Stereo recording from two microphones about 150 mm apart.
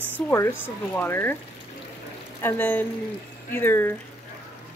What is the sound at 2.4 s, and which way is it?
Speech, 15° left (ahead or behind).